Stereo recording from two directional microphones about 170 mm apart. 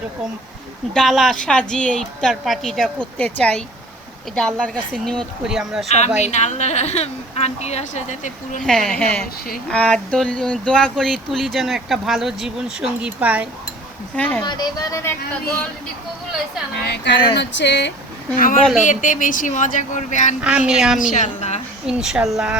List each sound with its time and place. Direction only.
0.9 s speech: centre (ahead or behind)
6.1 s a woman's voice: 40° left (ahead or behind)
8.6 s speech: 5° left (ahead or behind)
14.2 s speech: 10° left (ahead or behind)
14.4 s speech: 25° left (ahead or behind)
16.8 s speech: 85° left
18.3 s a woman's voice: 55° left (ahead or behind)
20.4 s speech: 5° right (ahead or behind)
21.1 s a woman's voice: 45° left (ahead or behind)
21.8 s speech: 5° right (ahead or behind)